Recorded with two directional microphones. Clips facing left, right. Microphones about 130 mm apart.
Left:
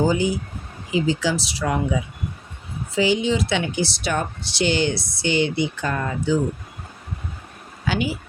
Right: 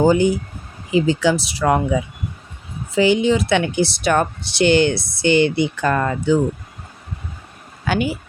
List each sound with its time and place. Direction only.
0.0 s speech: 60° right (ahead or behind)
2.9 s speech: 55° right (ahead or behind)
7.9 s speech: 55° right (ahead or behind)